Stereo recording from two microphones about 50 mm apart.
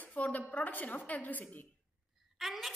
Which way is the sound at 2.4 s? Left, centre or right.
Centre.